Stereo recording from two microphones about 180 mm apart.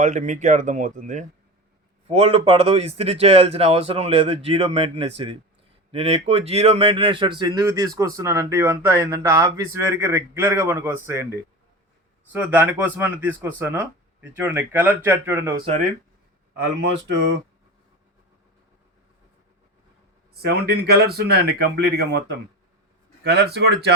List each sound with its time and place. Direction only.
0.0 s a man's voice: 40° right (ahead or behind); by 11.3 s 15° right (ahead or behind)
12.3 s speech: 10° right (ahead or behind)
17.1 s speech: 75° right (ahead or behind)
20.3 s speech: 60° right (ahead or behind)